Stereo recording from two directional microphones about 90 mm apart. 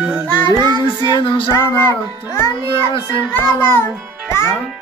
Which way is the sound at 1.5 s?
30° left (ahead or behind).